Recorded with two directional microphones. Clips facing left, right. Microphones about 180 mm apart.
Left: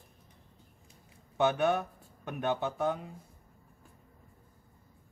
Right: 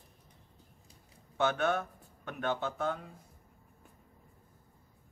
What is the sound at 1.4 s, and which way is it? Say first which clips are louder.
Speech: left 3 dB; 15° left (ahead or behind).